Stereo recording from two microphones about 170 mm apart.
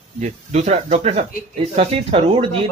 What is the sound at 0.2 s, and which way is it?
Speech, 40° right (ahead or behind).